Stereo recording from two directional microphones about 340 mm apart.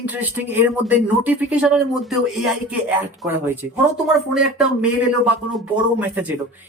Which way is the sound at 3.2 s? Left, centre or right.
Centre.